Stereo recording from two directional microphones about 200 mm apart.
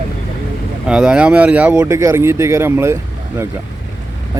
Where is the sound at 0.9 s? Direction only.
5° right (ahead or behind).